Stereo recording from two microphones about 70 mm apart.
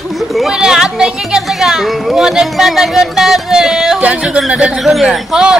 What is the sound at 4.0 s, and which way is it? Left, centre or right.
Speech, centre.